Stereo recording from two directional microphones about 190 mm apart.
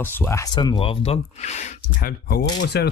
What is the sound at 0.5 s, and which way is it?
Speech, 25° left (ahead or behind).